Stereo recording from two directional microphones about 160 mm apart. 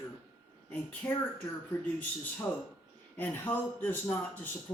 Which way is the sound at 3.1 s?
10° left (ahead or behind).